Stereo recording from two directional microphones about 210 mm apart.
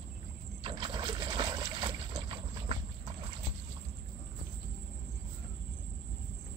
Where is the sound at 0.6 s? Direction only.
25° right (ahead or behind).